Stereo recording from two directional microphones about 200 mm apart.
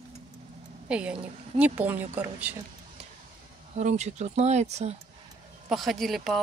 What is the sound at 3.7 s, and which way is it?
Speech, 35° right (ahead or behind).